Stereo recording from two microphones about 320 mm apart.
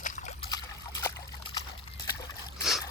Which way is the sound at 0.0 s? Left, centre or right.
Left.